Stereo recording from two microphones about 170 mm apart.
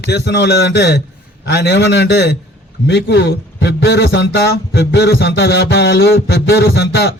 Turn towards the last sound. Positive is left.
turn(degrees=80)